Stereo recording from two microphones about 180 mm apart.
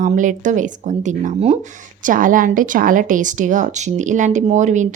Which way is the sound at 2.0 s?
50° right (ahead or behind).